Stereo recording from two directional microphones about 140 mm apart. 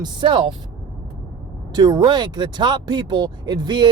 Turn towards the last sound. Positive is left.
turn(degrees=-30)  # may be behind; listen again after turning